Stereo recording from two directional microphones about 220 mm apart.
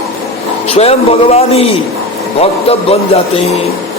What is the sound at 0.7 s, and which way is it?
A man's voice, 30° left (ahead or behind).